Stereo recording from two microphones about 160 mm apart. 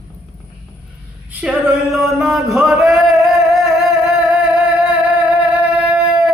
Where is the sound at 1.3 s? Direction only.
10° right (ahead or behind).